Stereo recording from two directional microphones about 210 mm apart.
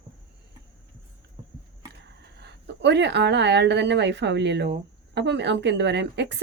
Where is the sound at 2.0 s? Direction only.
55° right (ahead or behind).